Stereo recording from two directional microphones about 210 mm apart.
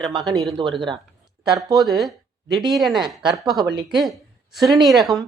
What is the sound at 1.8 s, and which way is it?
A woman's voice, centre (ahead or behind).